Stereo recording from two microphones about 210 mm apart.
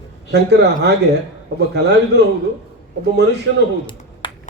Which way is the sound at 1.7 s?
55° right (ahead or behind).